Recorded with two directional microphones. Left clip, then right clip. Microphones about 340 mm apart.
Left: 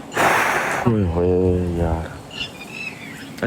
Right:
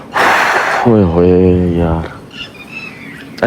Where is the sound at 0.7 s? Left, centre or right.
Centre.